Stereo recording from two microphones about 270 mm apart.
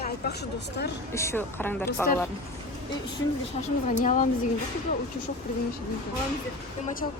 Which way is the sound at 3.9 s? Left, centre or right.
Left.